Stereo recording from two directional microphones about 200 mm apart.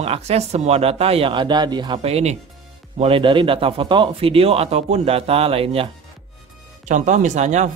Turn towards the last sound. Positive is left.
turn(degrees=-35)  # may be behind; listen again after turning